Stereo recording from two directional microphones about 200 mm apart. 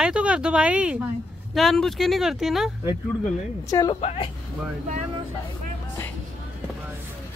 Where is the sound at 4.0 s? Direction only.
30° left (ahead or behind).